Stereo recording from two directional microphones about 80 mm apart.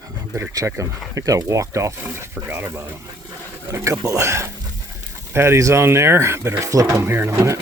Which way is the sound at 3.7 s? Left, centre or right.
Right.